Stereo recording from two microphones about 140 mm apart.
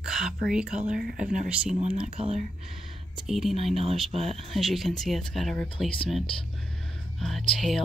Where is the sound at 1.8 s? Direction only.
50° right (ahead or behind).